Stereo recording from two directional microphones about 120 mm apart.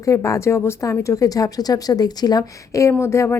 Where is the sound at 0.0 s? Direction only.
25° left (ahead or behind).